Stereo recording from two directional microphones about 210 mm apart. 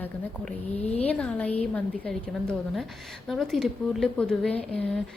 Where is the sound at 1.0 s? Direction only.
5° left (ahead or behind).